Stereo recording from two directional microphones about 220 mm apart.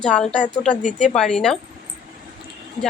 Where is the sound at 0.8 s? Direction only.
35° left (ahead or behind).